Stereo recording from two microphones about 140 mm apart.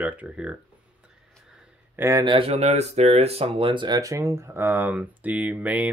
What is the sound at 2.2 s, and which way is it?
Speech, 40° right (ahead or behind).